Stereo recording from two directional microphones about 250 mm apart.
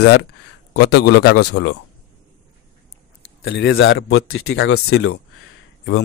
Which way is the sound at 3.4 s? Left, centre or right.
Left.